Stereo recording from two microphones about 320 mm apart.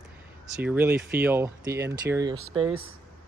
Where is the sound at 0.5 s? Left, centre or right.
Centre.